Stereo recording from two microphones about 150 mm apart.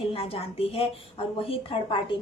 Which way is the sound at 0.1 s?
40° left (ahead or behind).